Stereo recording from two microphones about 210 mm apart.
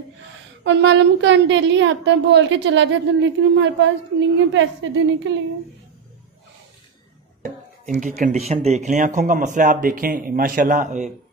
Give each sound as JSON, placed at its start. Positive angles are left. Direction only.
{"t": 0.7, "sound": "a woman's voice", "side_deg": -60}
{"t": 7.4, "sound": "speech", "side_deg": -35}